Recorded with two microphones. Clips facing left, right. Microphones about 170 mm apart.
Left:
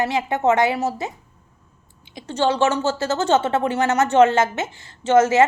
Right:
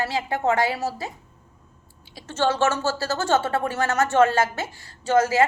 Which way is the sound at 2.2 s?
15° left (ahead or behind).